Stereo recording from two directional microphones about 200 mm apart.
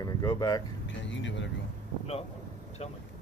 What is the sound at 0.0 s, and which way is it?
Speech, 20° left (ahead or behind).